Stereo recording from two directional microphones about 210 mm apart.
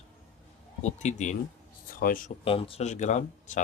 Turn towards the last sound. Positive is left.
turn(degrees=35)  # may be behind; listen again after turning